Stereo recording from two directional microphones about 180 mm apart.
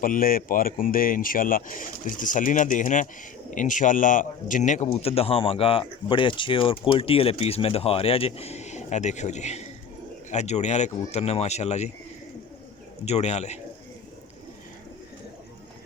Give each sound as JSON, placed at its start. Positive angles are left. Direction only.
{"t": 0.0, "sound": "speech", "side_deg": 50}
{"t": 13.1, "sound": "speech", "side_deg": 35}